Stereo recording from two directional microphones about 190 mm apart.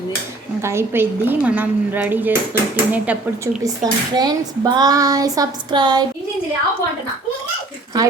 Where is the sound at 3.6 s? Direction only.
20° right (ahead or behind).